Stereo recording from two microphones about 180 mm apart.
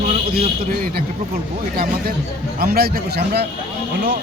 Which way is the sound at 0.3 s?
55° right (ahead or behind).